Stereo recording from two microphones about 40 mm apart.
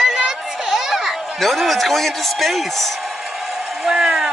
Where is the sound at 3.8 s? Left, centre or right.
Centre.